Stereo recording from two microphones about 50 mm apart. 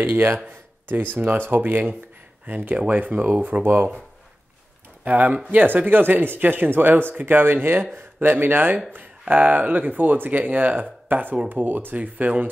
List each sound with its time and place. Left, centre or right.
0.0 s speech: right
3.6 s speech: right
5.0 s speech: right